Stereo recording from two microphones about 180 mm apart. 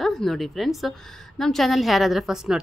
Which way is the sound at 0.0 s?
Centre (ahead or behind).